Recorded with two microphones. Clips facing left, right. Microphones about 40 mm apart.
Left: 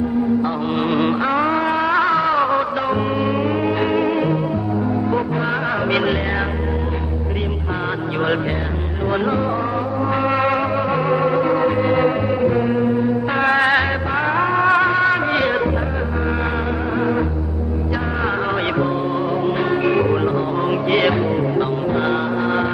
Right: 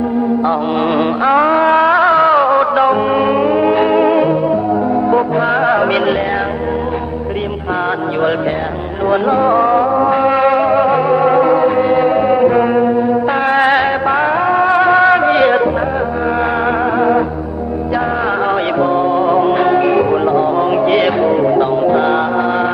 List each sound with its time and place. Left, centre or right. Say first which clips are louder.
0.8 s music: right 4 dB; centre; by 3.4 s right
3.4 s music: right 7 dB; centre
9.0 s music: right 7 dB; centre
9.4 s music: right 10 dB; right
10.1 s music: right 6 dB; centre
12.3 s music: right 7 dB; right
13.2 s music: right 2 dB; centre
14.9 s music: right 7 dB; right
17.0 s music: right 6 dB; right
18.3 s music: right 5 dB; centre
19.8 s music: right 5 dB; centre